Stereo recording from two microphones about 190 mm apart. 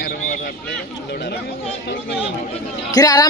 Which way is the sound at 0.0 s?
50° left (ahead or behind).